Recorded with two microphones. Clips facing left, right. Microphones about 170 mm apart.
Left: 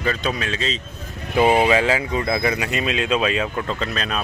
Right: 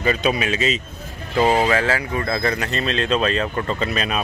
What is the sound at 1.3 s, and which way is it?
Speech, 15° left (ahead or behind).